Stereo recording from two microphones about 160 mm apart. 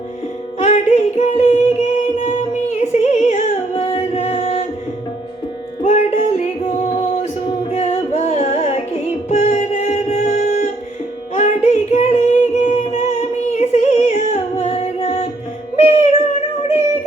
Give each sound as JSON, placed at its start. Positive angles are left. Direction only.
{"t": 0.6, "sound": "a sound", "side_deg": 45}
{"t": 2.5, "sound": "music", "side_deg": 45}
{"t": 5.8, "sound": "music", "side_deg": 45}
{"t": 7.7, "sound": "music", "side_deg": 45}
{"t": 11.3, "sound": "child singing", "side_deg": 50}
{"t": 12.6, "sound": "music", "side_deg": 45}